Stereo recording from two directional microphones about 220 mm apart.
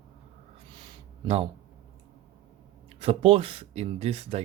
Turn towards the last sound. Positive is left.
turn(degrees=-25)  # may be behind; listen again after turning